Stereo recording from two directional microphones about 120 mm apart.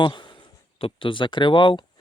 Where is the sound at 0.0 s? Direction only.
40° left (ahead or behind).